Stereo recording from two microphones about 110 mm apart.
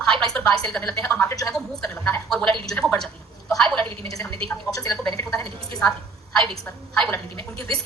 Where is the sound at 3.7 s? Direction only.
55° right (ahead or behind).